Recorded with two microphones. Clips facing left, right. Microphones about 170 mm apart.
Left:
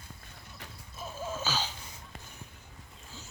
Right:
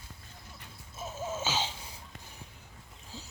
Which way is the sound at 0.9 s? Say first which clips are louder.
Right 1 dB; 25° right (ahead or behind).